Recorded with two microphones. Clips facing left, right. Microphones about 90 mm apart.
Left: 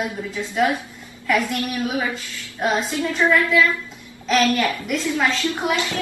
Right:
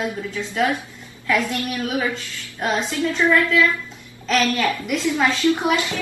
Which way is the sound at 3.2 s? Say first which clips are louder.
Even; 15° left (ahead or behind).